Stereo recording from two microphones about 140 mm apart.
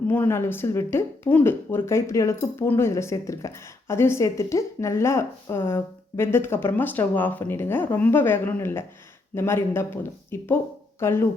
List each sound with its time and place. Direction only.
0.1 s speech: 15° left (ahead or behind)